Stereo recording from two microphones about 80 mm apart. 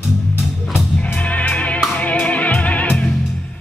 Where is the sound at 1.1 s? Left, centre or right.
Centre.